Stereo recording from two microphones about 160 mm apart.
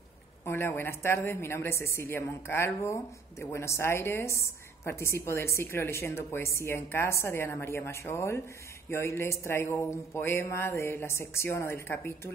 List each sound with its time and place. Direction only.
0.5 s a woman's voice: 15° left (ahead or behind)